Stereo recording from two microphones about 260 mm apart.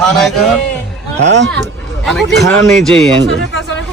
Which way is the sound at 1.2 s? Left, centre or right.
Right.